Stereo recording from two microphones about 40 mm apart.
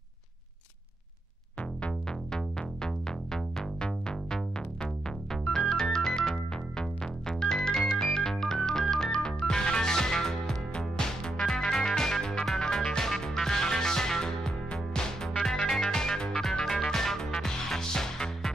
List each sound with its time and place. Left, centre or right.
2.3 s music: centre